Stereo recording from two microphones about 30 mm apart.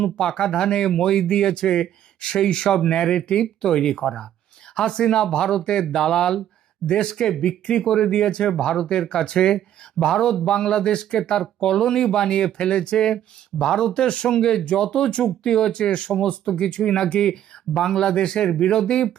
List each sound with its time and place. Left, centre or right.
0.2 s speech: left
6.8 s speech: left
7.1 s speech: centre; by 18.8 s left